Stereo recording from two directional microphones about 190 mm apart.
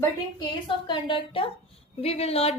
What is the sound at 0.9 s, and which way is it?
A woman's voice, 25° left (ahead or behind).